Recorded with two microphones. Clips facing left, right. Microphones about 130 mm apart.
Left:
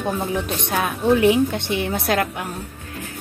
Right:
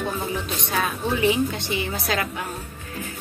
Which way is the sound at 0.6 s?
55° left (ahead or behind).